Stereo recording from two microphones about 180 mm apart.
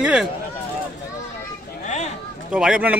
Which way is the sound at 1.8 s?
40° left (ahead or behind).